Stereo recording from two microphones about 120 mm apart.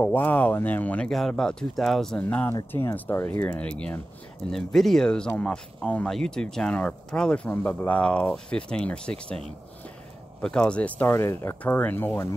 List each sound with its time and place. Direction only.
0.0 s speech: 15° left (ahead or behind)
2.2 s speech: 15° left (ahead or behind)
10.4 s speech: 5° left (ahead or behind)